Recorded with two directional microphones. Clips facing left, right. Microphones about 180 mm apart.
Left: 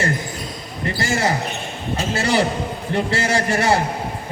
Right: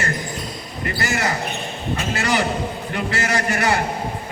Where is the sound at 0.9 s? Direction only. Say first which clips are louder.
Left 3 dB; 30° left (ahead or behind).